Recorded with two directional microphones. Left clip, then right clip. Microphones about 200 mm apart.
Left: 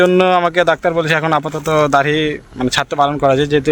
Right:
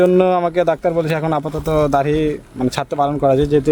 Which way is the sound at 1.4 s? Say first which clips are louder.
Left 3 dB; 15° left (ahead or behind).